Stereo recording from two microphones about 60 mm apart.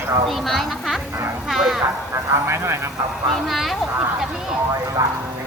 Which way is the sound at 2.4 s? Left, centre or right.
Right.